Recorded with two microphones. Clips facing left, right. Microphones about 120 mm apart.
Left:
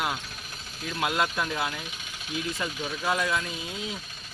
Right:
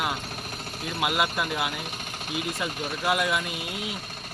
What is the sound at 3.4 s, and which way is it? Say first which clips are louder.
Speech: right 2 dB; 65° right (ahead or behind).